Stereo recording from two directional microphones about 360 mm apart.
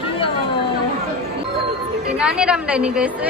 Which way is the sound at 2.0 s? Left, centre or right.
Centre.